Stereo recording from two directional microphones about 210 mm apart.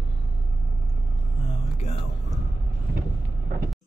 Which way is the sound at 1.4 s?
35° left (ahead or behind).